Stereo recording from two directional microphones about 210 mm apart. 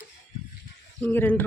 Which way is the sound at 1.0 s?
10° left (ahead or behind).